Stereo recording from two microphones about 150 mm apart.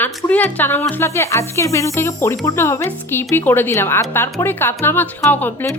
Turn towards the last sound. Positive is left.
turn(degrees=10)  # may be behind; listen again after turning